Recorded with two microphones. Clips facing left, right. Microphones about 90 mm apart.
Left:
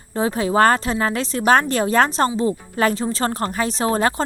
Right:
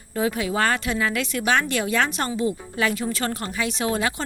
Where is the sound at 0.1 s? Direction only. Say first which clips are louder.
Left 4 dB; 30° left (ahead or behind).